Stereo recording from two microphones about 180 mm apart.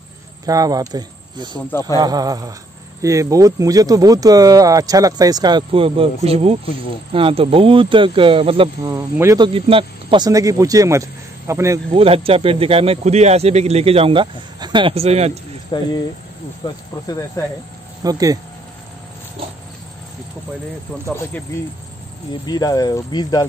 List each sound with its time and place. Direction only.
0.5 s speech: 20° right (ahead or behind)
1.7 s speech: 10° left (ahead or behind)
2.0 s speech: 20° right (ahead or behind)
8.8 s speech: 15° right (ahead or behind)
9.5 s speech: 30° right (ahead or behind)
11.9 s speech: 30° right (ahead or behind)
15.7 s speech: 25° left (ahead or behind)
17.4 s speech: 15° left (ahead or behind)
18.0 s speech: 20° right (ahead or behind)
22.5 s speech: 20° left (ahead or behind)